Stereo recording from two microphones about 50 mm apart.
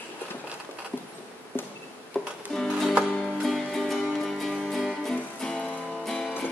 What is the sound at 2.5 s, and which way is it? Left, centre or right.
Music, centre.